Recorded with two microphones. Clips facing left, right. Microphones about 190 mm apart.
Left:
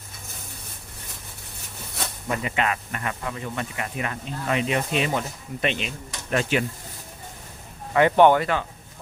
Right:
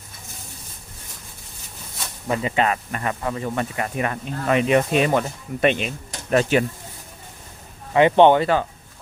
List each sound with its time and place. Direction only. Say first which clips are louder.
2.3 s speech: right 5 dB; 30° right (ahead or behind); by 5.9 s 50° right (ahead or behind)
6.3 s speech: right 5 dB; 40° right (ahead or behind)
7.9 s speech: right 3 dB; 20° right (ahead or behind)